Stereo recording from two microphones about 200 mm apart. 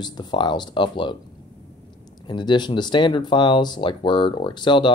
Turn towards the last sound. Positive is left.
turn(degrees=25)  # may be behind; listen again after turning